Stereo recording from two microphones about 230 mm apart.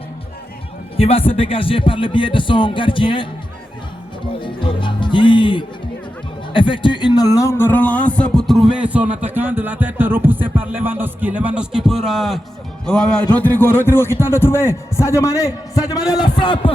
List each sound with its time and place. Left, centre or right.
0.9 s speech: left
4.4 s music: left
6.5 s a man's voice: left